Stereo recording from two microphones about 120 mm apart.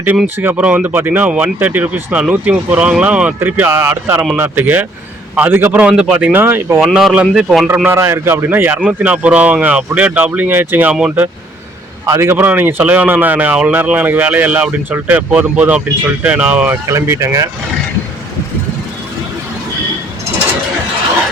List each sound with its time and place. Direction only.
0.3 s speech: 15° right (ahead or behind)
6.7 s a man's voice: 5° right (ahead or behind)
7.9 s speech: 20° right (ahead or behind)
12.0 s speech: 25° right (ahead or behind)